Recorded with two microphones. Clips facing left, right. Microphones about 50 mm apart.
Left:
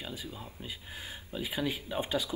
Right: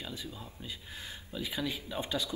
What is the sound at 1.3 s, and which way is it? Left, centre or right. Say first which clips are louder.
Speech: left 2 dB; centre.